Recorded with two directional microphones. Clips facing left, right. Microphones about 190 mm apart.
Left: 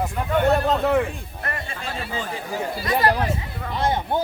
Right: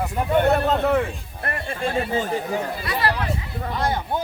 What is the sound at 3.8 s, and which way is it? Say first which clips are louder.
Speech: left 2 dB; 25° left (ahead or behind).